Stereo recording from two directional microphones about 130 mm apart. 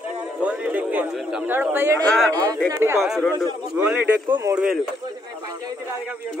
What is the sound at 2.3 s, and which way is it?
Speech, 30° right (ahead or behind).